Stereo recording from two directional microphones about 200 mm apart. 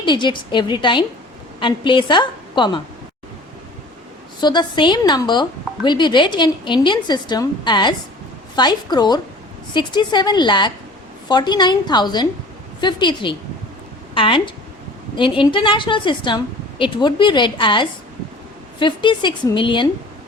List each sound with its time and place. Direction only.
0.0 s a woman's voice: 25° left (ahead or behind)
4.4 s a woman's voice: 20° left (ahead or behind)